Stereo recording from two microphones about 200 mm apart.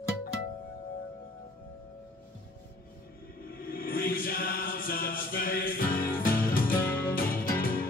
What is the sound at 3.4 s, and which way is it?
Music, 45° left (ahead or behind).